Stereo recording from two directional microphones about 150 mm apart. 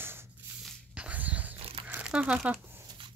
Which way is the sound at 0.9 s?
10° right (ahead or behind).